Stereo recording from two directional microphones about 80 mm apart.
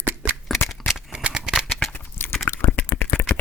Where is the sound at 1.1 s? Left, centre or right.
Centre.